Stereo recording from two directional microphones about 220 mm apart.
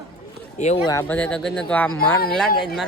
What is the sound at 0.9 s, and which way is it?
Speech, 10° left (ahead or behind).